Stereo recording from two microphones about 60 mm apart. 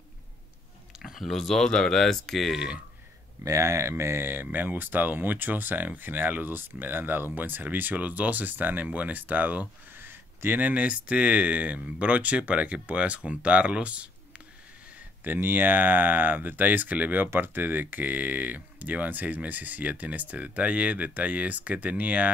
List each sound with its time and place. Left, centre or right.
0.9 s speech: centre
3.4 s speech: right
9.9 s a sound: right
10.6 s speech: right
15.2 s speech: right